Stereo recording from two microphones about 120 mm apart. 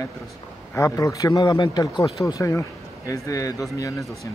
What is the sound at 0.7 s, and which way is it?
Speech, 30° left (ahead or behind).